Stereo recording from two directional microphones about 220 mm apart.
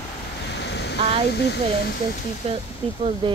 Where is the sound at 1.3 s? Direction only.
50° left (ahead or behind).